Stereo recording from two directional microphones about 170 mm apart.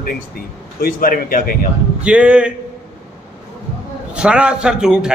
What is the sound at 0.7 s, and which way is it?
Speech, 55° left (ahead or behind).